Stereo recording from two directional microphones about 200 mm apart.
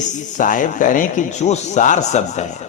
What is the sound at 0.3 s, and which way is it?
A man's voice, 40° left (ahead or behind).